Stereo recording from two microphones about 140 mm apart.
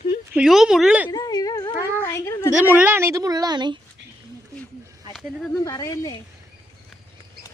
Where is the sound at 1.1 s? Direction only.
25° left (ahead or behind).